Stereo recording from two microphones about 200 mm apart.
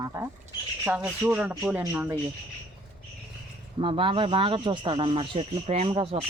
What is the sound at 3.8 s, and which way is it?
Speech, 25° right (ahead or behind).